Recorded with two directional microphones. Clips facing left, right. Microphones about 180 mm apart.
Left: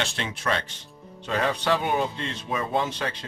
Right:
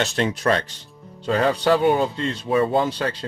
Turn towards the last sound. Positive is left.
turn(degrees=-35)  # may be behind; listen again after turning